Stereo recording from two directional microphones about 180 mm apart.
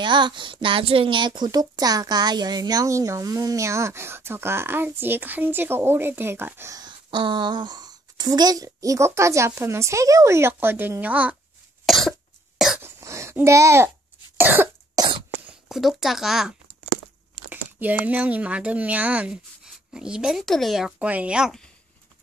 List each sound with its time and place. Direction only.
0.0 s a woman's voice: 25° right (ahead or behind); by 11.3 s 10° right (ahead or behind)
11.8 s cough: centre (ahead or behind)
12.8 s cough: 15° right (ahead or behind)
15.0 s cough: 25° right (ahead or behind)
15.3 s speech: centre (ahead or behind)